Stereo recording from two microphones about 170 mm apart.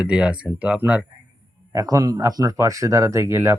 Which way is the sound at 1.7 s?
20° right (ahead or behind).